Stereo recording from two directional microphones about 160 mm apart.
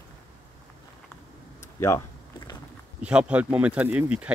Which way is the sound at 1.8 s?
20° left (ahead or behind).